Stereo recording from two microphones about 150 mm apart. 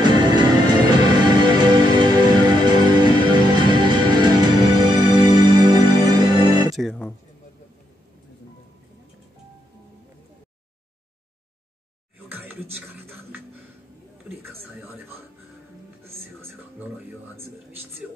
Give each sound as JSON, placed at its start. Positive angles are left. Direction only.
{"t": 0.0, "sound": "music", "side_deg": -30}
{"t": 6.8, "sound": "music", "side_deg": 5}
{"t": 12.3, "sound": "a sound", "side_deg": -10}
{"t": 12.9, "sound": "music", "side_deg": -10}
{"t": 16.0, "sound": "music", "side_deg": -15}